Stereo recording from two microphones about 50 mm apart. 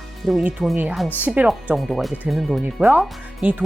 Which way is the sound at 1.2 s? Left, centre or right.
Right.